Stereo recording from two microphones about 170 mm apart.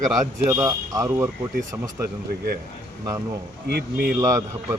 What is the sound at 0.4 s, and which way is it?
Speech, 20° right (ahead or behind).